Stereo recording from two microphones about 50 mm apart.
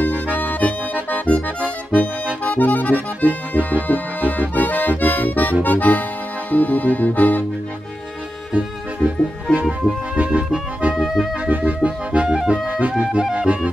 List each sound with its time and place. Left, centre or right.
0.4 s accordion: left
3.3 s accordion: right
3.8 s accordion: left
6.5 s music: left
8.5 s music: right
11.0 s music: centre
11.4 s music: right; by 13.5 s centre